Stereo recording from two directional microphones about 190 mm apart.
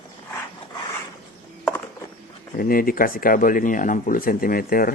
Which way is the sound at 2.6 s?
50° left (ahead or behind).